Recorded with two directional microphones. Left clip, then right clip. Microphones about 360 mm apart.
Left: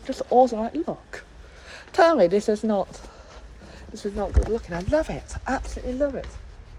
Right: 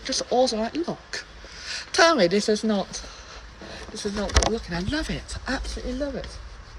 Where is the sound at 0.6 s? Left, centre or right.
Centre.